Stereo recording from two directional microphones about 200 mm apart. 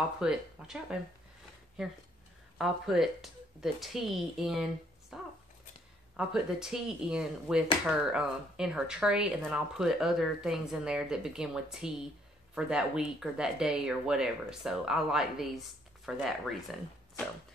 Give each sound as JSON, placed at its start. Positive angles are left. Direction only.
{"t": 0.2, "sound": "speech", "side_deg": -5}
{"t": 2.6, "sound": "speech", "side_deg": 0}
{"t": 5.1, "sound": "a sound", "side_deg": 0}
{"t": 6.1, "sound": "speech", "side_deg": -5}